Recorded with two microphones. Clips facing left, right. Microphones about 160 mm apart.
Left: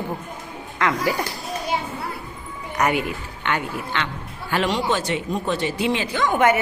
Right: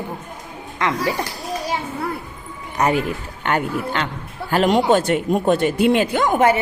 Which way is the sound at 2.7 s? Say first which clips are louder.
Right 3 dB; 30° right (ahead or behind).